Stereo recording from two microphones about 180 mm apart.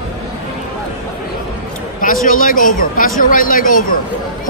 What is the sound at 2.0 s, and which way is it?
Speech, 50° left (ahead or behind).